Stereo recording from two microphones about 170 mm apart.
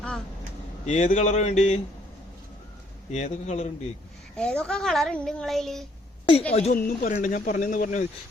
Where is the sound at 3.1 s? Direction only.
40° left (ahead or behind).